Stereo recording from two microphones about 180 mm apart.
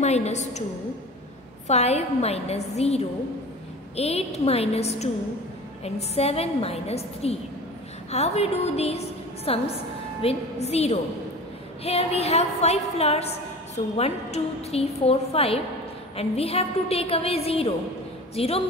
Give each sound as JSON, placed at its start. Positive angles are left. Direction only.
{"t": 0.0, "sound": "a woman's voice", "side_deg": 40}
{"t": 1.7, "sound": "a woman's voice", "side_deg": 35}
{"t": 6.1, "sound": "a woman's voice", "side_deg": 35}